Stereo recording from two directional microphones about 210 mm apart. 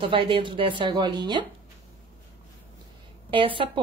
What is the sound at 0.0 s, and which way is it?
Speech, 25° right (ahead or behind).